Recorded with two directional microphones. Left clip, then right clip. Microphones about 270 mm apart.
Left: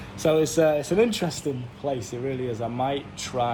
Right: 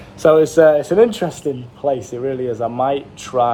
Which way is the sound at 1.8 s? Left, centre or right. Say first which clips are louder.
Right 9 dB; right.